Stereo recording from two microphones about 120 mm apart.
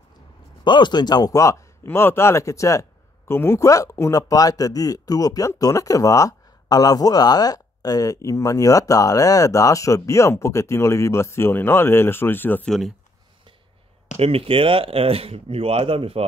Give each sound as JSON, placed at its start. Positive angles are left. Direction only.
{"t": 0.7, "sound": "speech", "side_deg": 40}
{"t": 14.1, "sound": "speech", "side_deg": -55}